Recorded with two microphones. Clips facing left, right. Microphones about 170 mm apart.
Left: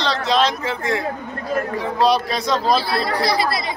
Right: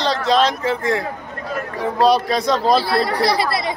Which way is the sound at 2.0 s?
50° right (ahead or behind).